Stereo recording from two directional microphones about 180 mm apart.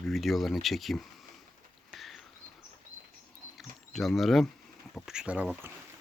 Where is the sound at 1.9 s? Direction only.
Centre (ahead or behind).